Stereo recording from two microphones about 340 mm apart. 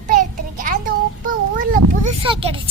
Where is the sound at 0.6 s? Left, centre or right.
Right.